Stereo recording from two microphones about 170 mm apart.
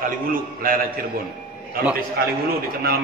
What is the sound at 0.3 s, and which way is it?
Speech, 55° right (ahead or behind).